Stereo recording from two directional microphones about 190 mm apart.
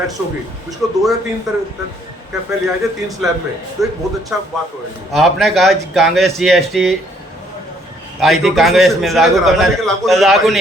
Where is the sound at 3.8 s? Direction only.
Centre (ahead or behind).